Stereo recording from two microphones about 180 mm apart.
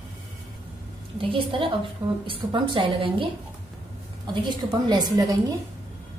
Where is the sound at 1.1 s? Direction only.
30° right (ahead or behind).